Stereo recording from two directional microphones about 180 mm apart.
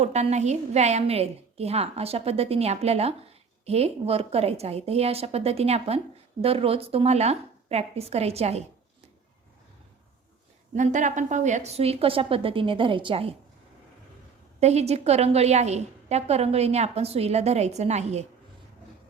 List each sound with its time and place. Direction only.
0.0 s a woman's voice: 40° right (ahead or behind)
10.8 s a woman's voice: 45° right (ahead or behind)
14.6 s a woman's voice: 35° right (ahead or behind)